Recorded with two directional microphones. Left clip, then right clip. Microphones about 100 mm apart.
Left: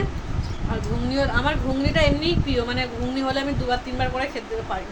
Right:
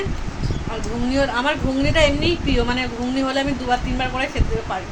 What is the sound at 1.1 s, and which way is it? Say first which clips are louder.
Speech: right 3 dB; 25° right (ahead or behind).